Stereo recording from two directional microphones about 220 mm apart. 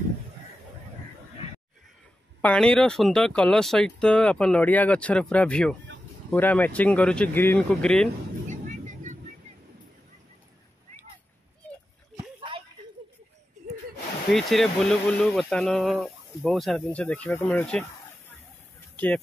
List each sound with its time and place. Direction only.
2.4 s speech: 5° left (ahead or behind)
8.5 s vehicle: 35° right (ahead or behind)
12.4 s a sound: 25° right (ahead or behind)
14.3 s speech: centre (ahead or behind)